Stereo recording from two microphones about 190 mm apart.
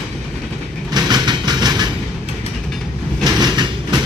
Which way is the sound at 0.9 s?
20° right (ahead or behind).